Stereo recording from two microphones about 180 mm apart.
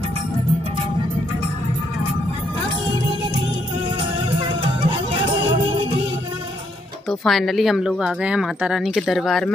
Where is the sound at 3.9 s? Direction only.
30° right (ahead or behind).